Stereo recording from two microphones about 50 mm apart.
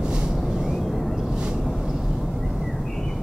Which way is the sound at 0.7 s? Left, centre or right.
Centre.